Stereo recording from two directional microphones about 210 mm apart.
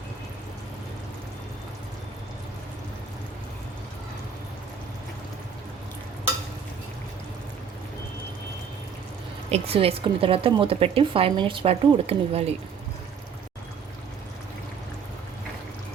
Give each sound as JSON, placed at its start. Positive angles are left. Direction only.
{"t": 9.5, "sound": "a woman's voice", "side_deg": -25}